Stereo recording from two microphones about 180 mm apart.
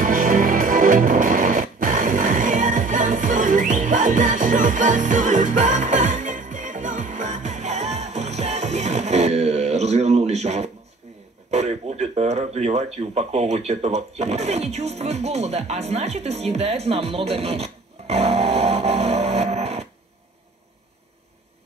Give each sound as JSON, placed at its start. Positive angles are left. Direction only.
{"t": 0.0, "sound": "music", "side_deg": -50}
{"t": 11.5, "sound": "speech", "side_deg": -35}